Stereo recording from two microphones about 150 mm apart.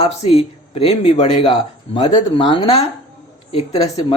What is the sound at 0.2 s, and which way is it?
Speech, 40° left (ahead or behind).